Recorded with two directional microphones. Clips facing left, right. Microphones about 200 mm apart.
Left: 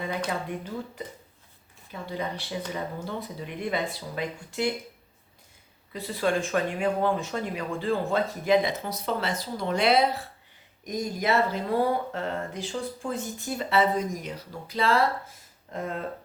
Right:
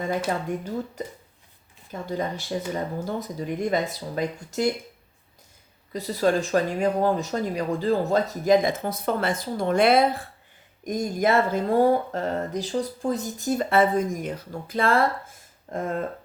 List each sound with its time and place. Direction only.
1.0 s speech: 45° right (ahead or behind)
5.9 s speech: 40° right (ahead or behind)